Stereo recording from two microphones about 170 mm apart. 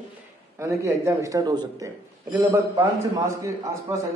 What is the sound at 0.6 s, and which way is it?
A man's voice, 15° right (ahead or behind).